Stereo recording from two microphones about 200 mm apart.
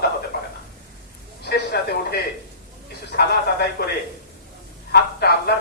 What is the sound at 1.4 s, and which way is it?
Speech, 55° left (ahead or behind).